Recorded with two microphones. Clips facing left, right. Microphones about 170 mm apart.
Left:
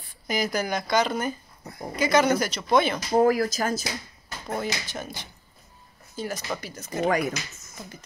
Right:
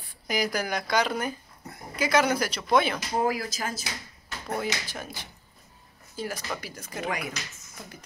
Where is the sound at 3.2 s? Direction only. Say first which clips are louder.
Left 7 dB; 50° left (ahead or behind).